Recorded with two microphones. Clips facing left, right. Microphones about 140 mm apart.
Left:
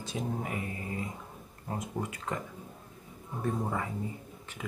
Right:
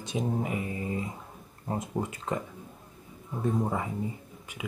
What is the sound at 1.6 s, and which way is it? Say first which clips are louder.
Speech: right 4 dB; 25° right (ahead or behind).